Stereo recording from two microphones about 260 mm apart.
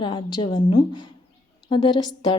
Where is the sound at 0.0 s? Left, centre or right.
Centre.